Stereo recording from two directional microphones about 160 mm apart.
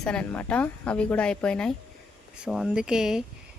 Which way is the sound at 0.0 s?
5° left (ahead or behind).